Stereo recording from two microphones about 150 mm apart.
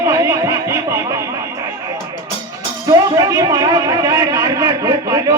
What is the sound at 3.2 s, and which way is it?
A man's voice, 25° right (ahead or behind).